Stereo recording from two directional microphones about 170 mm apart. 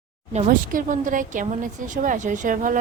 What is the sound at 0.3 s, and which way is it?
Speech, 50° right (ahead or behind).